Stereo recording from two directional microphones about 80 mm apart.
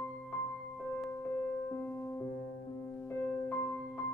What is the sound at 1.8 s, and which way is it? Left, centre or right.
Music, left.